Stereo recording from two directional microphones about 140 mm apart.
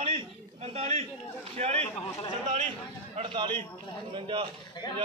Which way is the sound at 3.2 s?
35° right (ahead or behind).